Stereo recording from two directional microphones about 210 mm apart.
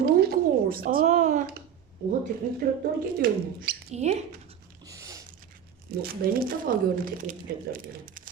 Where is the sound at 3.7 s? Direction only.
50° right (ahead or behind).